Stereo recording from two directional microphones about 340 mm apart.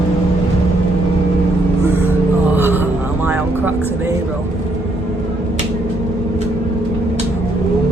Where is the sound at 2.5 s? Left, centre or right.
Centre.